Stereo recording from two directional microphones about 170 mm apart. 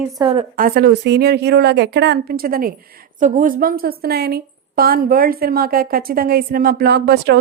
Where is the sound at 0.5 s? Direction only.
60° right (ahead or behind).